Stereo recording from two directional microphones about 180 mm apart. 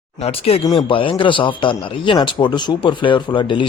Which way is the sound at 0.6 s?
25° left (ahead or behind).